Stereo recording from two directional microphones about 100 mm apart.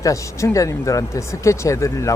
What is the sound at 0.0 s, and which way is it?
Speech, 30° left (ahead or behind).